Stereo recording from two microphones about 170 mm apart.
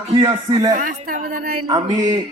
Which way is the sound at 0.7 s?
50° right (ahead or behind).